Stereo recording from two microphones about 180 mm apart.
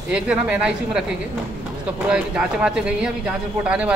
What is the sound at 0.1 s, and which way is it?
Speech, 5° right (ahead or behind).